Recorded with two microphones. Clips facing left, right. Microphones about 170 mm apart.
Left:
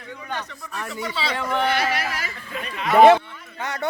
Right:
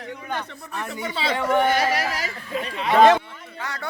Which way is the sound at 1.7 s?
40° right (ahead or behind).